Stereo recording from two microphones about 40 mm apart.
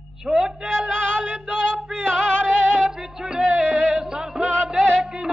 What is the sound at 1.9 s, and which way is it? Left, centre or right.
Music, centre.